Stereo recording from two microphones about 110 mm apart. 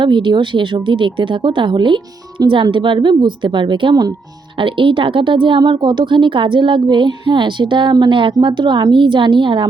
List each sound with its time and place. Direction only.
0.0 s a woman's voice: 45° right (ahead or behind)